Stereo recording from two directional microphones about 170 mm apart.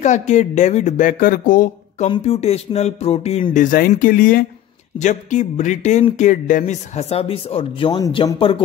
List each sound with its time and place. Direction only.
0.0 s speech: 45° left (ahead or behind)
2.0 s speech: 30° left (ahead or behind); by 4.5 s 55° left (ahead or behind)
4.9 s speech: 45° left (ahead or behind)